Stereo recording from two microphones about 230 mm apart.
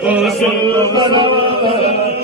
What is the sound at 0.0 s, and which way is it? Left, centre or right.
Chant, centre.